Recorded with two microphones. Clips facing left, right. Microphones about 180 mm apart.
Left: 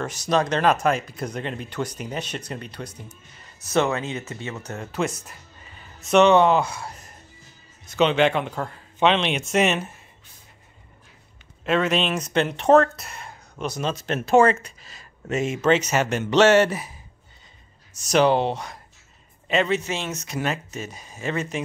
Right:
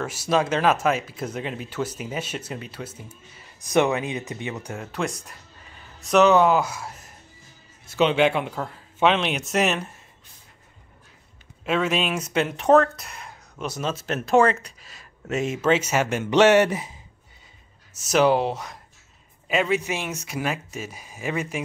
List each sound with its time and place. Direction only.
0.0 s speech: 5° right (ahead or behind)
4.9 s speech: centre (ahead or behind)
11.6 s speech: 5° right (ahead or behind)
17.9 s speech: 5° right (ahead or behind)